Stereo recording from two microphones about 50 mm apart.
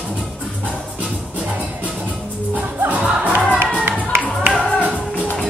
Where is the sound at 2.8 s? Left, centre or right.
Right.